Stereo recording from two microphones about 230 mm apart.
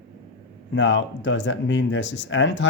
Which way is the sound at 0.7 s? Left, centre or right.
Left.